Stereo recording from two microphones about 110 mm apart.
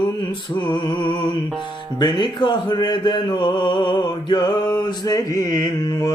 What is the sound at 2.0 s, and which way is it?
Speech, 40° left (ahead or behind).